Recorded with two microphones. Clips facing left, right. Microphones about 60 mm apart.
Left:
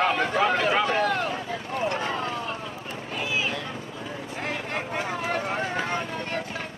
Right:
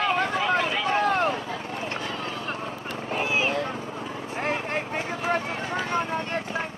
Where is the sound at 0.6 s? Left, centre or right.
Left.